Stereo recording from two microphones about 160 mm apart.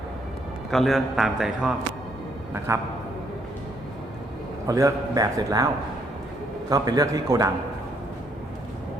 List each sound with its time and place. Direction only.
0.7 s a man's voice: centre (ahead or behind)
2.7 s a man's voice: 15° right (ahead or behind)
4.6 s a man's voice: 20° right (ahead or behind)
6.7 s a man's voice: 25° right (ahead or behind)